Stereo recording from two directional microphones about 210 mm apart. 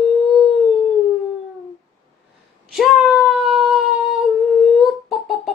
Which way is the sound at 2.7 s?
Centre (ahead or behind).